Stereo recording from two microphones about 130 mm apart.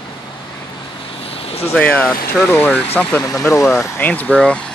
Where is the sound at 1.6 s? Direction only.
15° left (ahead or behind).